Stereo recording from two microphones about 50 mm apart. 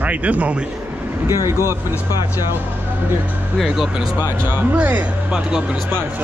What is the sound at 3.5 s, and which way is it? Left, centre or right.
Speech, centre.